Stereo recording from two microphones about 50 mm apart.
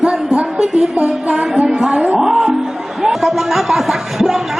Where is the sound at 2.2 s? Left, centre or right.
Centre.